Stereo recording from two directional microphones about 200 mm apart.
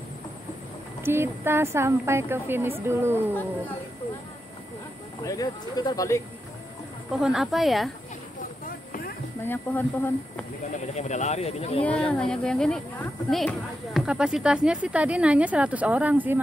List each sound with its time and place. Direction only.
1.0 s speech: 10° right (ahead or behind)
5.2 s speech: 20° left (ahead or behind)
7.1 s speech: centre (ahead or behind)
9.4 s speech: 10° left (ahead or behind)
10.7 s speech: 35° left (ahead or behind)
12.1 s speech: 5° left (ahead or behind)